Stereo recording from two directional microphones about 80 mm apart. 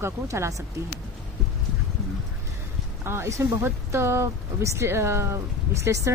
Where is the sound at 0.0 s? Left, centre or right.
Right.